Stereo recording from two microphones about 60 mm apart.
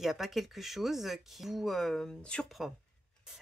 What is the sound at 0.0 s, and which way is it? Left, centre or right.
Speech, centre.